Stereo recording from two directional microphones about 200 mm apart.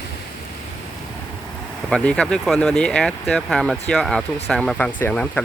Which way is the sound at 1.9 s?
5° left (ahead or behind).